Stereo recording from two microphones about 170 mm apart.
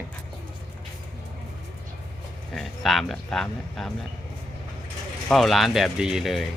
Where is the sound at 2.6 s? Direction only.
Centre (ahead or behind).